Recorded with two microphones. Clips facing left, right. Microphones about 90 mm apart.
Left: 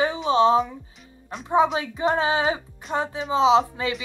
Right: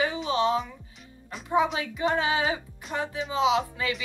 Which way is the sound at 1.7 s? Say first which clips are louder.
Left 4 dB; 35° left (ahead or behind).